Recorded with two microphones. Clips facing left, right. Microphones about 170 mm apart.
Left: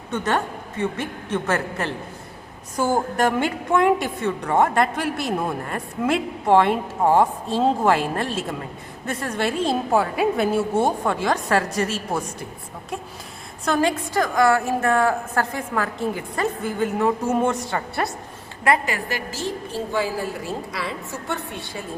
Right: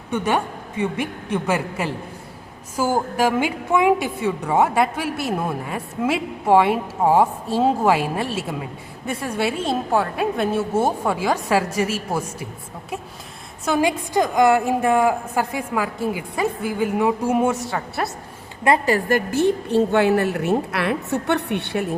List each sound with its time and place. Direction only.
0.1 s a woman's voice: 10° right (ahead or behind)
13.7 s a woman's voice: 10° right (ahead or behind)
18.9 s a woman's voice: 45° right (ahead or behind); by 21.8 s 70° right (ahead or behind)